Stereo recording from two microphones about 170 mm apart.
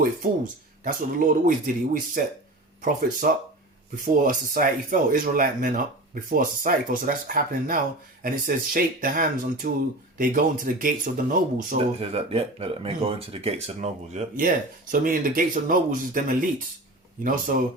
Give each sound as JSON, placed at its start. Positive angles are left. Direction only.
{"t": 0.9, "sound": "speech", "side_deg": -50}
{"t": 11.8, "sound": "speech", "side_deg": -35}